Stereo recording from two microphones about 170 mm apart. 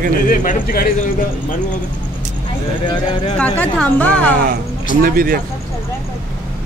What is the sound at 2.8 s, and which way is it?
Speech, 25° left (ahead or behind).